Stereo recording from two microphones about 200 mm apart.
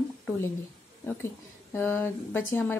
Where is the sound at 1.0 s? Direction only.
10° left (ahead or behind).